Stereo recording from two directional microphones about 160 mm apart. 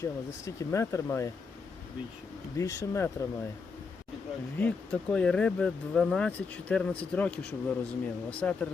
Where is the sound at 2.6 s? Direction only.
20° left (ahead or behind).